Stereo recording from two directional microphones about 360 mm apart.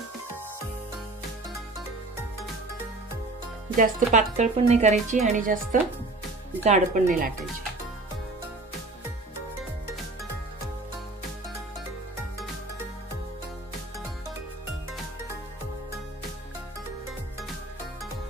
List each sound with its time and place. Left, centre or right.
3.7 s speech: right